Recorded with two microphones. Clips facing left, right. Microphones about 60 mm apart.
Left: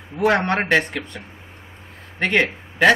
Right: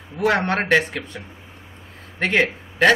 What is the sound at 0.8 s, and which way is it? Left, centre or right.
Speech, left.